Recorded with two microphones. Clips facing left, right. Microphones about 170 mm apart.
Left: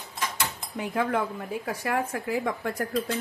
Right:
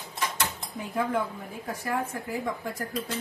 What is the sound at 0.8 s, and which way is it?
A woman's voice, 85° left.